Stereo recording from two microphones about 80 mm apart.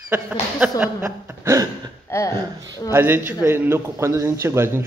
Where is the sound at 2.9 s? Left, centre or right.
Right.